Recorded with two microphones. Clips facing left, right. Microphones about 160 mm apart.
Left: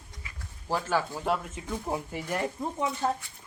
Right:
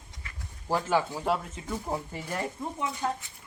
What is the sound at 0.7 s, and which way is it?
Speech, 15° right (ahead or behind).